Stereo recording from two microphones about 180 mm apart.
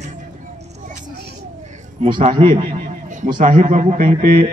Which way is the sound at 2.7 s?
45° right (ahead or behind).